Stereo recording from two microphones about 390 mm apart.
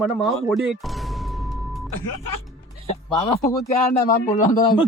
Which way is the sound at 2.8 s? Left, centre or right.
Centre.